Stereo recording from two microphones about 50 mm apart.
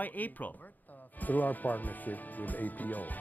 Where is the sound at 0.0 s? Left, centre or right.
Left.